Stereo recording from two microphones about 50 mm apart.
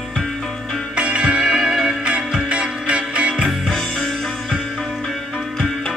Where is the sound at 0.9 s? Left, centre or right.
Right.